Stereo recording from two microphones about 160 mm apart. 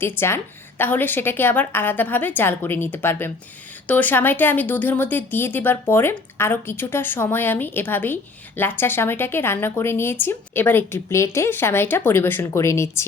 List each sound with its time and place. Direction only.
0.0 s speech: 15° left (ahead or behind)